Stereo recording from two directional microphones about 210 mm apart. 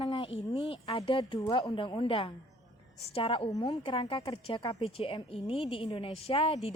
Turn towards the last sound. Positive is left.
turn(degrees=25)  # may be behind; listen again after turning